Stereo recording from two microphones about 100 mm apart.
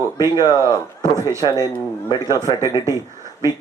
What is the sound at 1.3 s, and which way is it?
Speech, 35° left (ahead or behind).